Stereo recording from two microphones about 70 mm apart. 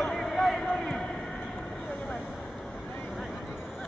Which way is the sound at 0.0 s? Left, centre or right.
Centre.